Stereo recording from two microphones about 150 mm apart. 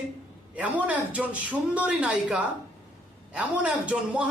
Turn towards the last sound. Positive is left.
turn(degrees=-10)  # may be behind; listen again after turning